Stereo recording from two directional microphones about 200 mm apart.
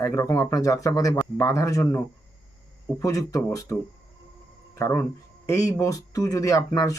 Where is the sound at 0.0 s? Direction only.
15° left (ahead or behind).